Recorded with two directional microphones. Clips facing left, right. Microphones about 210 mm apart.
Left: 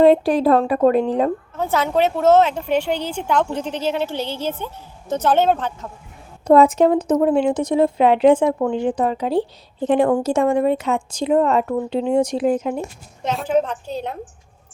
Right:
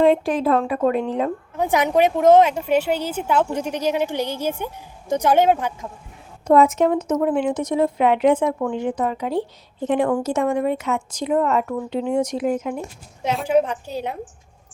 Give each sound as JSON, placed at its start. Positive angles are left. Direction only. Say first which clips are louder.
{"t": 0.0, "sound": "speech", "louder": "left 4 dB", "side_deg": 35}
{"t": 1.5, "sound": "a woman's voice", "louder": "right 3 dB", "side_deg": -15}
{"t": 6.5, "sound": "speech", "louder": "left 3 dB", "side_deg": 35}
{"t": 13.2, "sound": "a woman's voice", "louder": "right 1 dB", "side_deg": -10}